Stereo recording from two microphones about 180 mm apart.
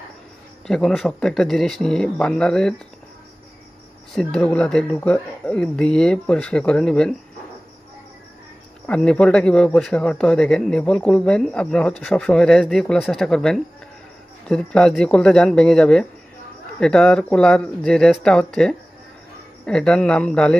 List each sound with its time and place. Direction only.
0.7 s speech: 5° left (ahead or behind)
4.1 s speech: 5° left (ahead or behind)
8.8 s speech: 5° left (ahead or behind)